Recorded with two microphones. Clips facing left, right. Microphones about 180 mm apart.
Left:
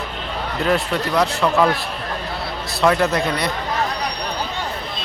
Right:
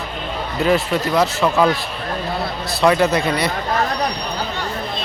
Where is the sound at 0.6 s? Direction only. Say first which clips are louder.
Right 3 dB; centre (ahead or behind).